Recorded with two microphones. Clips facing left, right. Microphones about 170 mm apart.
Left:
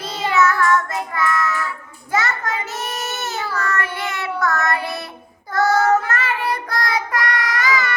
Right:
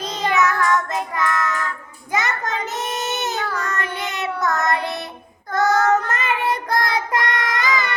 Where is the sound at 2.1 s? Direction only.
20° right (ahead or behind).